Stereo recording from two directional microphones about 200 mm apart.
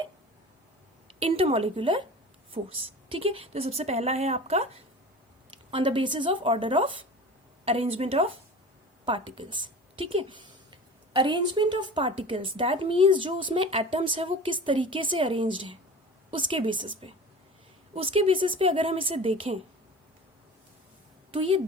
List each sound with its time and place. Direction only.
1.2 s a woman's voice: 30° right (ahead or behind)
21.3 s speech: 25° right (ahead or behind)